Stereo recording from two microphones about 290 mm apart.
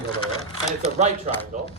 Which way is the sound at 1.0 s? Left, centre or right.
Right.